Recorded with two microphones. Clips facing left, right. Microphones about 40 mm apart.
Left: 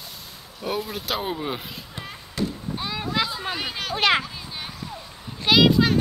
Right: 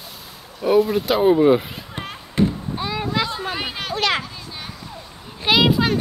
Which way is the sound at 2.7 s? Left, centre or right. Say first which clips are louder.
Right 3 dB; centre.